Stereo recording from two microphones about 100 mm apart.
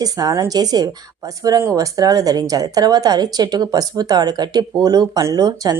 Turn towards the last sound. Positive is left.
turn(degrees=-40)  # may be behind; listen again after turning